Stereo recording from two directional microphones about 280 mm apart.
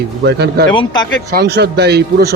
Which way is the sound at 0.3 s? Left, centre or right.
Right.